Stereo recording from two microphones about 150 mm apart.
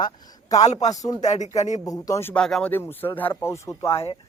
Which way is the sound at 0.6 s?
50° left (ahead or behind).